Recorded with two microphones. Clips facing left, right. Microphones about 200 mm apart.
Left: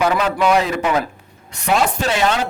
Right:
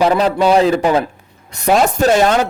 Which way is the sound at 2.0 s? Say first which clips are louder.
Right 6 dB; 45° right (ahead or behind).